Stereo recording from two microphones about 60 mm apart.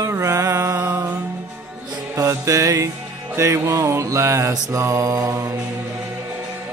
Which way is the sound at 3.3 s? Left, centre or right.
Right.